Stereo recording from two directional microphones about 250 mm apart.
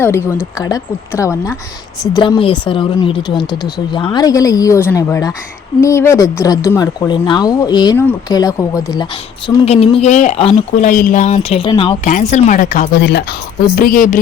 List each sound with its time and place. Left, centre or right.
0.0 s speech: centre
12.1 s a woman's voice: left